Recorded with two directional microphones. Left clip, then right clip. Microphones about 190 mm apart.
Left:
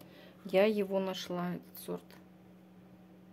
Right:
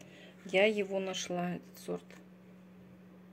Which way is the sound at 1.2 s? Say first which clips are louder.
Right 2 dB; 5° right (ahead or behind).